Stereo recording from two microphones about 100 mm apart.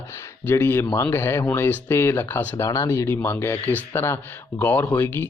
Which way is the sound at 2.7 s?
35° left (ahead or behind).